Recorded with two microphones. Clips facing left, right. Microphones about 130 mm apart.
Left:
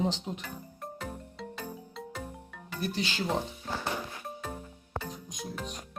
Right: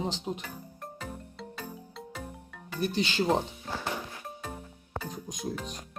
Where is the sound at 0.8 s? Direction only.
Centre (ahead or behind).